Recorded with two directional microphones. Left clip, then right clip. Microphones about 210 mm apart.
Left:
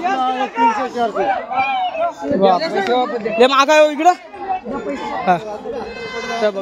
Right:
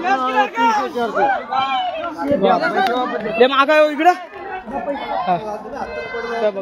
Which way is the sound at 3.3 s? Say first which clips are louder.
Left 2 dB; 25° left (ahead or behind).